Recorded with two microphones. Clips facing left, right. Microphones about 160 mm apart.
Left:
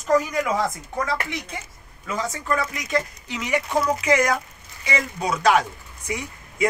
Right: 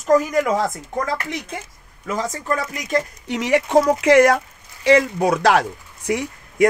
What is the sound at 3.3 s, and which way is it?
Speech, 75° right (ahead or behind).